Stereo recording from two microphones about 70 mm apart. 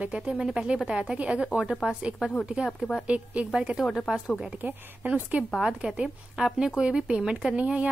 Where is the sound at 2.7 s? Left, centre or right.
Centre.